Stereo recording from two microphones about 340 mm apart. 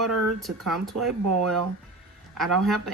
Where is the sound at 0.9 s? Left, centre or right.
Right.